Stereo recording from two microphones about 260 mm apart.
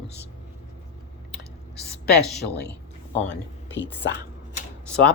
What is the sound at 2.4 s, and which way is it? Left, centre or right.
Speech, left.